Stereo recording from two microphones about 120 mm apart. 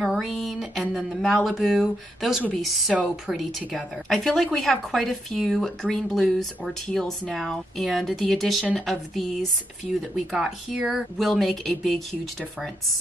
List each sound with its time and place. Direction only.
0.0 s a woman's voice: centre (ahead or behind)